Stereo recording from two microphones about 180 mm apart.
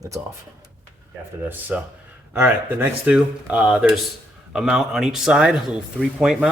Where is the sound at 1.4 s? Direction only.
10° right (ahead or behind).